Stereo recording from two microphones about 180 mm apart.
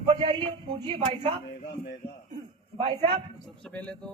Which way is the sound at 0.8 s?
35° right (ahead or behind).